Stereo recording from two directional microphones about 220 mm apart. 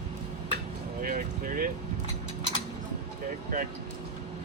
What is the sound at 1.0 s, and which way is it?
Speech, 40° right (ahead or behind).